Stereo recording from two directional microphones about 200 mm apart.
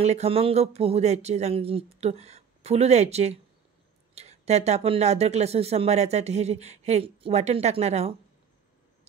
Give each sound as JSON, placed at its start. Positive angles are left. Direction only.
{"t": 0.0, "sound": "speech", "side_deg": -30}